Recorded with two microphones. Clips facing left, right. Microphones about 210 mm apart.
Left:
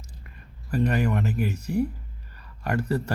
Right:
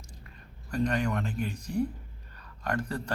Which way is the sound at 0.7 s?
5° left (ahead or behind).